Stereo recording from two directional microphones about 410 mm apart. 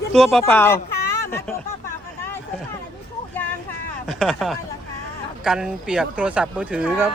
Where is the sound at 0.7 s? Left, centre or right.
Left.